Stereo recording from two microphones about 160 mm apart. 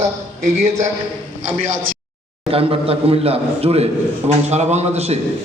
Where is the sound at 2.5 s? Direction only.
35° right (ahead or behind).